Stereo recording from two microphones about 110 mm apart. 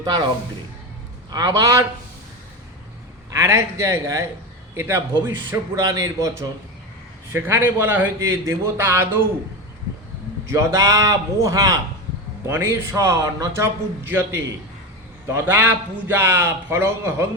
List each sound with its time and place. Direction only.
0.0 s a man's voice: 35° right (ahead or behind)
1.3 s a man's voice: 40° right (ahead or behind)
3.3 s a man's voice: 25° right (ahead or behind)
10.4 s a man's voice: 25° right (ahead or behind)